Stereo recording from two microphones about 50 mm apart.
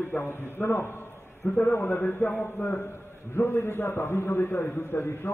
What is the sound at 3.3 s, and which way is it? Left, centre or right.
A man's voice, left.